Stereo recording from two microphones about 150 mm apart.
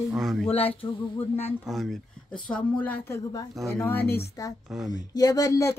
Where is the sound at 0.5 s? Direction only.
40° left (ahead or behind).